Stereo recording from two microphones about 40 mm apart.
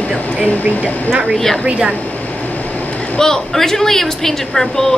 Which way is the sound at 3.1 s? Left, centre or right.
Centre.